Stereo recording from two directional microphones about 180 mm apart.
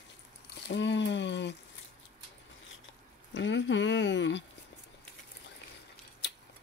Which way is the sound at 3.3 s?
90° left.